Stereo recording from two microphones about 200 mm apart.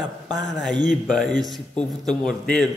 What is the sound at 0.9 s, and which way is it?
A man's voice, centre (ahead or behind).